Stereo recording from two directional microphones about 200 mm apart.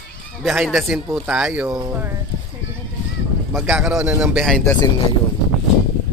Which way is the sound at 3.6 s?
Centre (ahead or behind).